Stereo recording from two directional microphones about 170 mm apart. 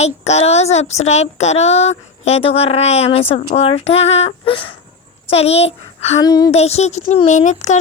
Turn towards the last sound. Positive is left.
turn(degrees=45)  # may be behind; listen again after turning